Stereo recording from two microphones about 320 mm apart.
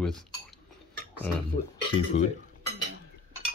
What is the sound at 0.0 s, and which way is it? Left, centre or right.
Dishes, centre.